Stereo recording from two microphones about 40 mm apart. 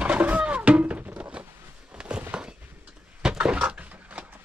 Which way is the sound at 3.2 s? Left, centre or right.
Centre.